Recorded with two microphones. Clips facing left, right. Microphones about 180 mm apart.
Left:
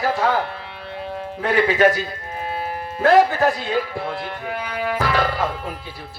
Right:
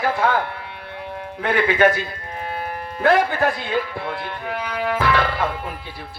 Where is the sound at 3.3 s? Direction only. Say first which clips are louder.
Left 1 dB; 40° left (ahead or behind).